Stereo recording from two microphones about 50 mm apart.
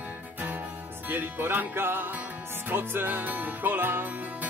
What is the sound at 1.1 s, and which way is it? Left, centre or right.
Music, right.